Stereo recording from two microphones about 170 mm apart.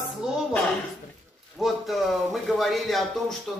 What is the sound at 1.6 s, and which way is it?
Speech, centre (ahead or behind).